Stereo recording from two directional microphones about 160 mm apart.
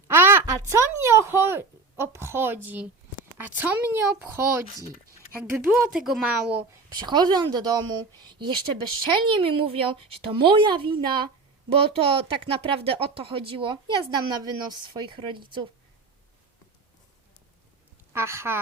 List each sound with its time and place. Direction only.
0.1 s a woman's voice: 15° right (ahead or behind)
5.4 s a woman's voice: 15° right (ahead or behind)
7.0 s speech: 25° right (ahead or behind)
18.1 s a woman's voice: 15° right (ahead or behind)